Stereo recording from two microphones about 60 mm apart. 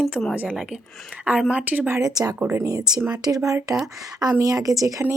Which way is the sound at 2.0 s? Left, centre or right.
Right.